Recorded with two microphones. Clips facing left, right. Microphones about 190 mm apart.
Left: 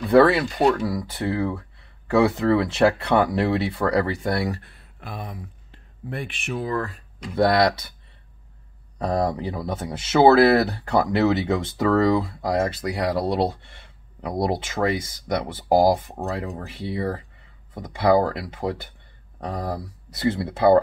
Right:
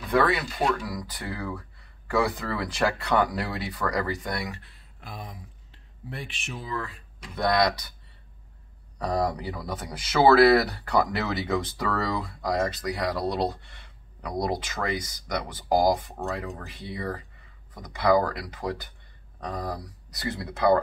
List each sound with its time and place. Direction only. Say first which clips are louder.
0.1 s speech: left 8 dB; 30° left (ahead or behind)
4.6 s a sound: left 6 dB; 60° left (ahead or behind)
6.0 s speech: left 7 dB; 55° left (ahead or behind)
8.9 s speech: left 3 dB; 25° left (ahead or behind)